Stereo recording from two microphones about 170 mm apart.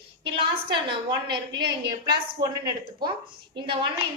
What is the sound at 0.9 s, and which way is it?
A woman's voice, 25° right (ahead or behind).